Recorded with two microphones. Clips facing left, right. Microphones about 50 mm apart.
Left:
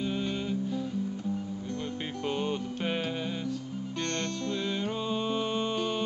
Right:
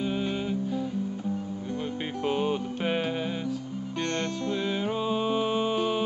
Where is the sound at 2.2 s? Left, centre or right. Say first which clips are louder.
Right 4 dB; centre.